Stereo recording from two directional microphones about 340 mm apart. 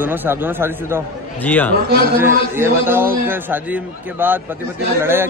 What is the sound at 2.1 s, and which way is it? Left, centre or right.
A man's voice, centre.